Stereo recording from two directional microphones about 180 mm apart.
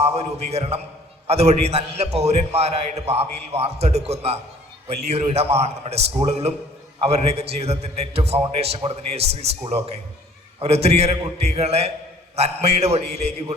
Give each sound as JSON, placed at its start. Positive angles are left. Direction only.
{"t": 0.0, "sound": "a man's voice", "side_deg": -35}